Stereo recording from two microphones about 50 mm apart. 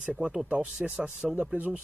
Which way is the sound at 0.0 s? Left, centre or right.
Centre.